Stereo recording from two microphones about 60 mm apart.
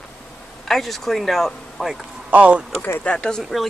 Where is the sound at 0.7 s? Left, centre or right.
Centre.